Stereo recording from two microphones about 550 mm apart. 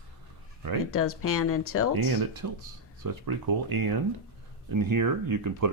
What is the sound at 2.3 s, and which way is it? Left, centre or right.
Speech, right.